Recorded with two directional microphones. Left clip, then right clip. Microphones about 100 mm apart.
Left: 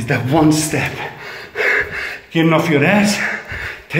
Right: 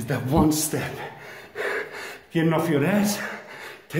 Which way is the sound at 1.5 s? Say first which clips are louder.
Left 12 dB; 25° right (ahead or behind).